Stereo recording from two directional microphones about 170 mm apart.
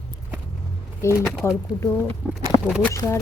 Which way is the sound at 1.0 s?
15° left (ahead or behind).